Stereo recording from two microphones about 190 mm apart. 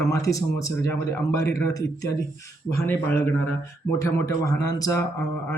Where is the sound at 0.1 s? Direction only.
15° left (ahead or behind).